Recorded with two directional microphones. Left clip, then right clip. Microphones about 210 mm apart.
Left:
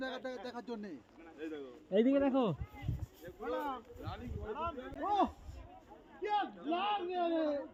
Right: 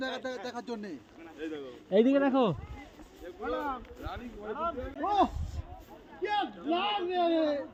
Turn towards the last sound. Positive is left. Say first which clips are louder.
# right 7 dB
turn(degrees=0)  # may be behind; listen again after turning